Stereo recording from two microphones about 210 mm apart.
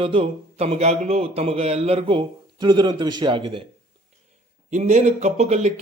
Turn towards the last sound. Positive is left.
turn(degrees=-30)  # may be behind; listen again after turning